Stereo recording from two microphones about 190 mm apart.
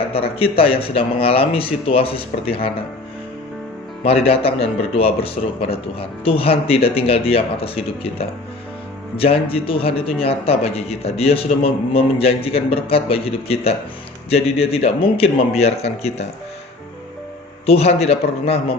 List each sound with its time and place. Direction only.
0.1 s speech: 30° left (ahead or behind)
4.0 s a man's voice: 30° left (ahead or behind)
17.7 s a man's voice: 35° left (ahead or behind)